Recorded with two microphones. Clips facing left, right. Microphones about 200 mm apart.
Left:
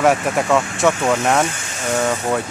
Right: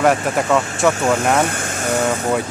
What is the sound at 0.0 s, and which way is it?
Speech, centre (ahead or behind).